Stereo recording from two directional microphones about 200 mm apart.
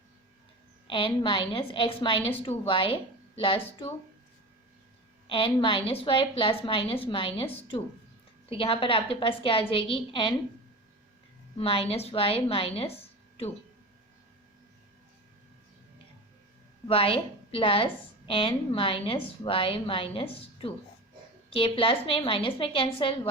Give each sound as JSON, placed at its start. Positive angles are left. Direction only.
{"t": 0.9, "sound": "a woman's voice", "side_deg": 25}
{"t": 5.3, "sound": "a woman's voice", "side_deg": 25}
{"t": 11.5, "sound": "a woman's voice", "side_deg": 30}
{"t": 16.9, "sound": "a woman's voice", "side_deg": 30}